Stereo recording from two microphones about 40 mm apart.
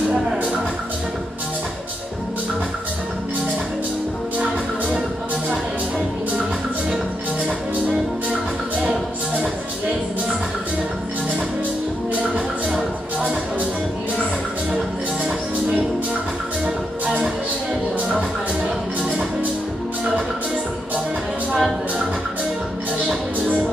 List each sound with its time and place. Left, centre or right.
4.4 s music: right
16.6 s music: right
21.5 s music: centre